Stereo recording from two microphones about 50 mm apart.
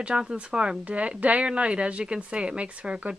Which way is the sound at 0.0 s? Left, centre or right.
Centre.